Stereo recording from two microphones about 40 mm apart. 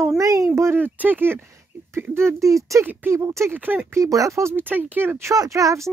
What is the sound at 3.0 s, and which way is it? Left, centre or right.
Speech, right.